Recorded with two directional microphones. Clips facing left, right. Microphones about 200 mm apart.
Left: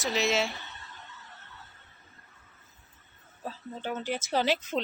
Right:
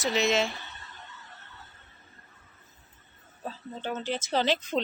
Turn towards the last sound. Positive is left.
turn(degrees=10)  # may be behind; listen again after turning